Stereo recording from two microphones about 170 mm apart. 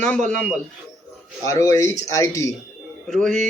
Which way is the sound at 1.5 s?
20° left (ahead or behind).